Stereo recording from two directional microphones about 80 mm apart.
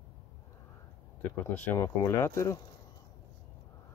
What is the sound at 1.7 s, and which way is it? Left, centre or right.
Speech, left.